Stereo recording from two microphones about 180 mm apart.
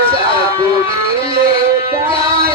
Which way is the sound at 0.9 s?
30° left (ahead or behind).